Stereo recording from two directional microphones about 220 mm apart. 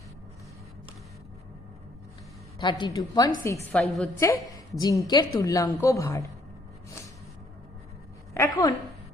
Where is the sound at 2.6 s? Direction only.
20° left (ahead or behind).